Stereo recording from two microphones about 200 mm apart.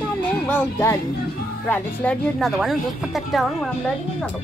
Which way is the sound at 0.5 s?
10° left (ahead or behind).